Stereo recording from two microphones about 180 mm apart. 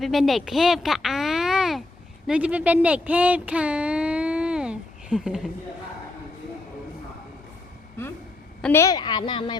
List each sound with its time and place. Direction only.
0.0 s speech: centre (ahead or behind)
8.6 s a woman's voice: 15° left (ahead or behind)